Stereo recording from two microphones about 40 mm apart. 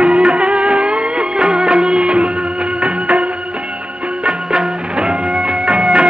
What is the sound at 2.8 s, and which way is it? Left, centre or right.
Music, right.